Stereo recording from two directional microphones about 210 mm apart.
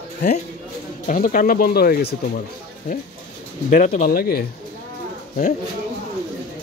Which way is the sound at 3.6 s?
35° left (ahead or behind).